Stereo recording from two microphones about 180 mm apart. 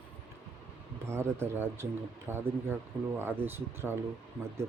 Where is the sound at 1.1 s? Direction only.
15° right (ahead or behind).